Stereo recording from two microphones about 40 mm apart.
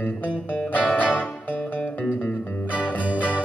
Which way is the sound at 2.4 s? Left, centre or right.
Left.